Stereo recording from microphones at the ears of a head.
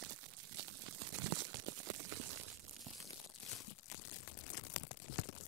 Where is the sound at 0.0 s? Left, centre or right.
Right.